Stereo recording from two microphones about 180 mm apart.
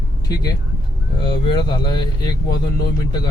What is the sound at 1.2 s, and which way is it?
Speech, 25° left (ahead or behind).